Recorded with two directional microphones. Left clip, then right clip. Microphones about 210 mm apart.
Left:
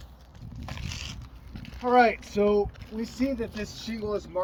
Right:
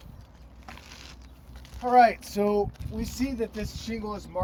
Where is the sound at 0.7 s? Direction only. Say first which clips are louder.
Left 6 dB; 55° left (ahead or behind).